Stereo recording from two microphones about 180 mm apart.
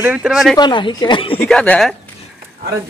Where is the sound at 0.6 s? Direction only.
25° left (ahead or behind).